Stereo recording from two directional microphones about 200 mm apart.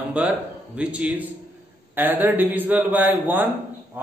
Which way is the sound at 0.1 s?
5° right (ahead or behind).